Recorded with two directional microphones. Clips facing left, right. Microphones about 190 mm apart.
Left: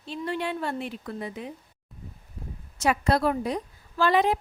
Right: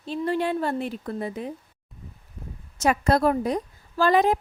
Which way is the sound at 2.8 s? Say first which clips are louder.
Right 3 dB; 45° right (ahead or behind).